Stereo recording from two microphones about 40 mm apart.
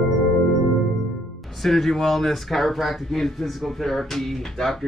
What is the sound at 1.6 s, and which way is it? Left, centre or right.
Speech, centre.